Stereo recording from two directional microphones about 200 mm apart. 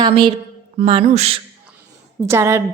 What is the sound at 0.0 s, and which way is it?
A woman's voice, 25° right (ahead or behind).